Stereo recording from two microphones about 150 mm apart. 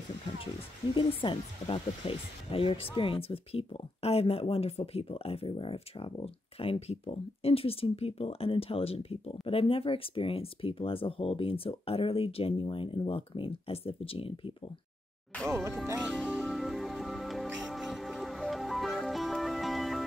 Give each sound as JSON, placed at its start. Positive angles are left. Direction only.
{"t": 0.9, "sound": "speech", "side_deg": 35}
{"t": 15.4, "sound": "speech", "side_deg": -20}
{"t": 16.0, "sound": "speech", "side_deg": -5}
{"t": 16.4, "sound": "music", "side_deg": 0}